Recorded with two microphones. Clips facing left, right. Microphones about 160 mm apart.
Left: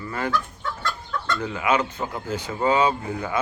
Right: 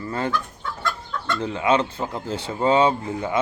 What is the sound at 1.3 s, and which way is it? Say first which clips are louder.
Speech: right 3 dB; 25° right (ahead or behind).